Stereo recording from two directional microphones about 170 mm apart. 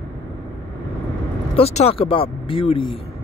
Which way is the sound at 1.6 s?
35° left (ahead or behind).